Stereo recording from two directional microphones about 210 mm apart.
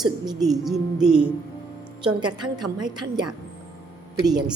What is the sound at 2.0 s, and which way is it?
A woman's voice, 20° right (ahead or behind).